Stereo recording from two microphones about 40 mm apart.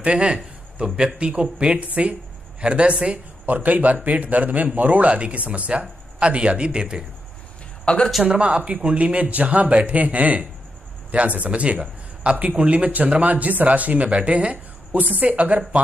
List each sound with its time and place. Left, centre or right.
0.0 s a man's voice: right
3.4 s speech: right
7.8 s speech: left
8.3 s speech: right